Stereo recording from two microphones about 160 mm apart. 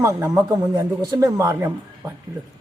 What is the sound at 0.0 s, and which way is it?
Speech, 10° right (ahead or behind).